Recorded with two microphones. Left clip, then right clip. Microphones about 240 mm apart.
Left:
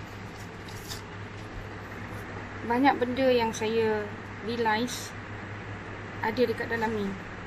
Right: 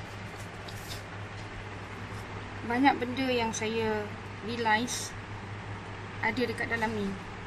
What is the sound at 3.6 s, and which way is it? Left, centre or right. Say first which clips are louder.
Speech: left 4 dB; centre.